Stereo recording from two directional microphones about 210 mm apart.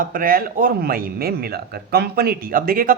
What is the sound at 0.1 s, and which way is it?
Speech, 45° right (ahead or behind).